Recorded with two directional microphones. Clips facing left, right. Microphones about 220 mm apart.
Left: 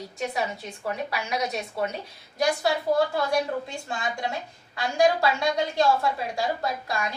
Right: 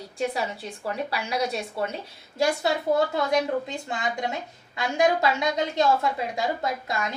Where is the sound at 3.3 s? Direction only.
20° right (ahead or behind).